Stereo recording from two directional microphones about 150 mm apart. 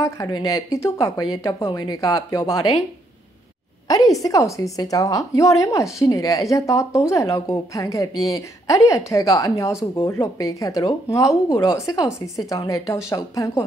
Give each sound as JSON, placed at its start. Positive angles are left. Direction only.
{"t": 0.0, "sound": "a woman's voice", "side_deg": 20}
{"t": 4.1, "sound": "a woman's voice", "side_deg": 25}